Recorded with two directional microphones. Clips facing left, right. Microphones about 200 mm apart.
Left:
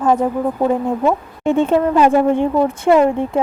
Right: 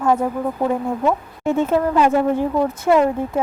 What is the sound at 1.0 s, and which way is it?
A woman's voice, 30° left (ahead or behind).